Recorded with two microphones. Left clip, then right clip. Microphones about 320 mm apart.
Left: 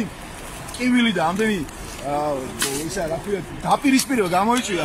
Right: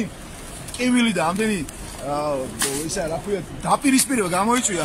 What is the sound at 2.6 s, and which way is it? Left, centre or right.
Speech, centre.